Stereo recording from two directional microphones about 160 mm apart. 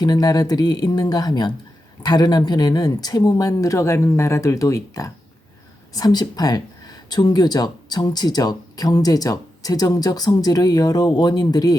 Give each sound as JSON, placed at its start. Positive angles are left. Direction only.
{"t": 0.0, "sound": "speech", "side_deg": 25}